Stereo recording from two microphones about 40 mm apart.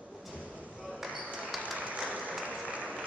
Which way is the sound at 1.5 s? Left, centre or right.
Centre.